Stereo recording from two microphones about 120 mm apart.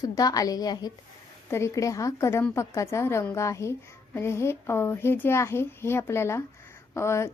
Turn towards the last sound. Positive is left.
turn(degrees=25)  # may be behind; listen again after turning